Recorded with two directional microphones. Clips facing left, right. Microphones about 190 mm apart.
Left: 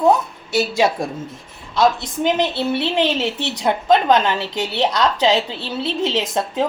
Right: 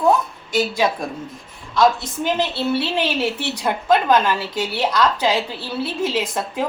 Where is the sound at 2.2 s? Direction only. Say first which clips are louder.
Left 2 dB; 15° left (ahead or behind).